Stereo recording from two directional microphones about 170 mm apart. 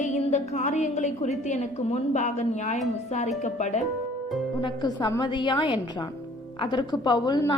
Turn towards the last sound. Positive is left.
turn(degrees=25)  # may be behind; listen again after turning